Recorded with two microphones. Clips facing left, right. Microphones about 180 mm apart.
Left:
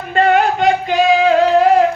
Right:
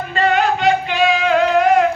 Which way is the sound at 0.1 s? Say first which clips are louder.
Left 4 dB; 50° left (ahead or behind).